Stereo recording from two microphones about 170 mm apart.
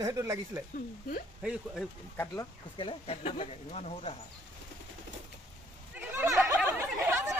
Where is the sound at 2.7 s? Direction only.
35° left (ahead or behind).